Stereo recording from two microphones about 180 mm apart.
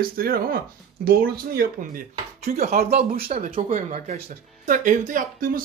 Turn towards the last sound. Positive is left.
turn(degrees=-50)  # may be behind; listen again after turning